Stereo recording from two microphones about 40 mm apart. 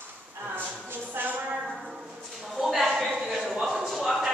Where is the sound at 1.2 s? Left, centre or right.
Right.